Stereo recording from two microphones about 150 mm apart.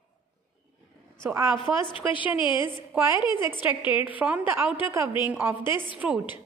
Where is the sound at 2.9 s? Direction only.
15° right (ahead or behind).